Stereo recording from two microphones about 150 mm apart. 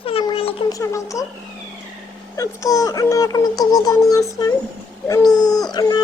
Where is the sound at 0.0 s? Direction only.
40° left (ahead or behind).